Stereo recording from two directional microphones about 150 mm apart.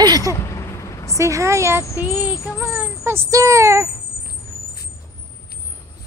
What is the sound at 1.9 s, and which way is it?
Speech, 25° left (ahead or behind).